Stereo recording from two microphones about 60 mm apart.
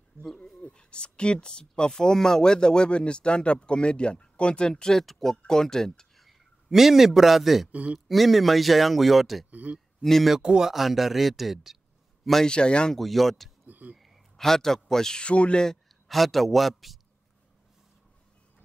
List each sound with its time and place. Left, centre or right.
0.6 s speech: centre
7.7 s speech: right
8.1 s speech: centre
9.5 s speech: right
10.0 s speech: centre
10.3 s speech: centre
12.4 s speech: centre
13.0 s speech: centre
13.7 s a sound: right
13.9 s a man's voice: centre